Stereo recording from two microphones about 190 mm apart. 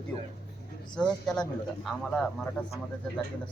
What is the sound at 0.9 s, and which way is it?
Speech, 5° left (ahead or behind).